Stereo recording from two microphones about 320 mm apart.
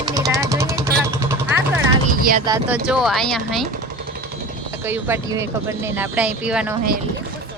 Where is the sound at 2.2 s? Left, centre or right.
Right.